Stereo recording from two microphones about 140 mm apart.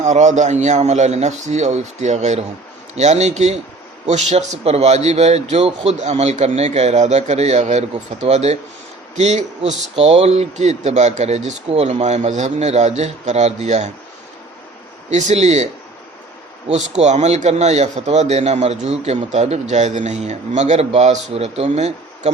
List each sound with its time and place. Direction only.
0.0 s a man's voice: 60° right (ahead or behind)
15.1 s a man's voice: 55° right (ahead or behind)
17.0 s a man's voice: 50° right (ahead or behind)